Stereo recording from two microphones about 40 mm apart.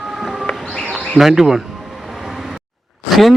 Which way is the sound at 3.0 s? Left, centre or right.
Centre.